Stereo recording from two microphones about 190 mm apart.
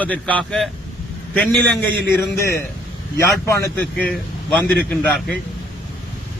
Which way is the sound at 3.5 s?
10° left (ahead or behind).